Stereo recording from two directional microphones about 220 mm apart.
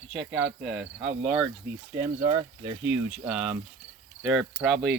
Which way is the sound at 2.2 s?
30° right (ahead or behind).